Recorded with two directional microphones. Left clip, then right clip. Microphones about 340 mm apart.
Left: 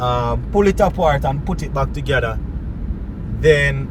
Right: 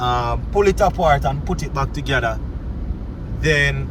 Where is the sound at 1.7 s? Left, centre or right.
Centre.